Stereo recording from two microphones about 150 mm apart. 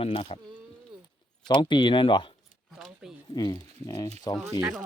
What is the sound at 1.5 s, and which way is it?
Speech, 30° left (ahead or behind).